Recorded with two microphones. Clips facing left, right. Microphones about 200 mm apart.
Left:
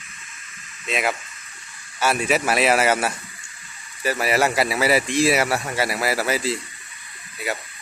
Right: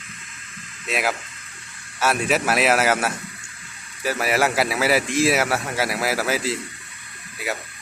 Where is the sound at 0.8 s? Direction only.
5° right (ahead or behind).